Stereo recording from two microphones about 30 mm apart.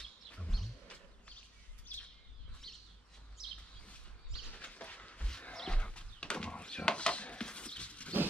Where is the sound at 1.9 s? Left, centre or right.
Left.